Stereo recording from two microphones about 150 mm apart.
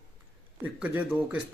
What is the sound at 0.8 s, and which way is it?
Speech, 10° right (ahead or behind).